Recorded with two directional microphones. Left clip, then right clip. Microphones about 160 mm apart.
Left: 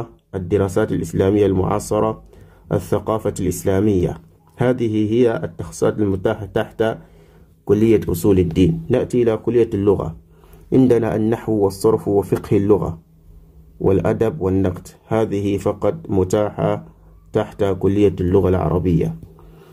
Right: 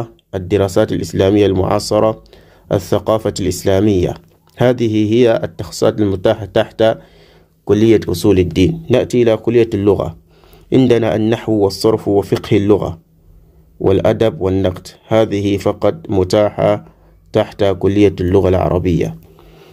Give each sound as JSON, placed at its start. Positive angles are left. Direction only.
{"t": 0.0, "sound": "speech", "side_deg": -25}